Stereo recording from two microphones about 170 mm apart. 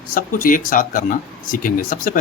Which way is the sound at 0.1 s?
55° left (ahead or behind).